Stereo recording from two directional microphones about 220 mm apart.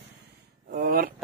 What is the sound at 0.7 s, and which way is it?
Speech, 40° right (ahead or behind).